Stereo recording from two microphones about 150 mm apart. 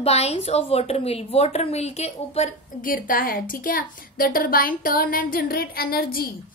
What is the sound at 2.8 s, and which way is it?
A woman's voice, 70° left (ahead or behind).